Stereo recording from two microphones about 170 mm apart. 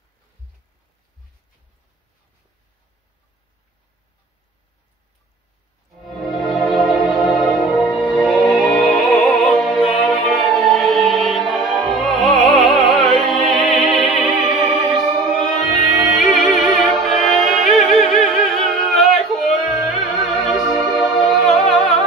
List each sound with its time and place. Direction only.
6.0 s music: centre (ahead or behind)